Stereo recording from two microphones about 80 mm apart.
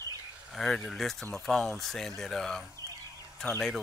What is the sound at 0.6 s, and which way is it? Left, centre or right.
Speech, centre.